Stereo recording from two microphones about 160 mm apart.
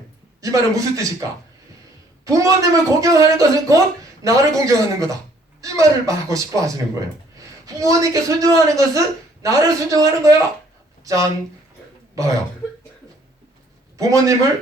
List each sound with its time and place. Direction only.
0.4 s a woman's voice: 20° right (ahead or behind)
2.2 s a woman's voice: 20° right (ahead or behind)
12.1 s throat clearing: 20° right (ahead or behind)
14.0 s a woman's voice: 20° right (ahead or behind)